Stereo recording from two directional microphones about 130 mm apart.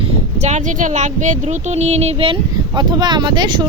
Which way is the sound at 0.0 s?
60° right (ahead or behind).